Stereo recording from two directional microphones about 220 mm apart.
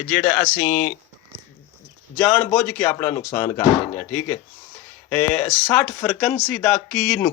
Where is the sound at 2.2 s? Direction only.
Centre (ahead or behind).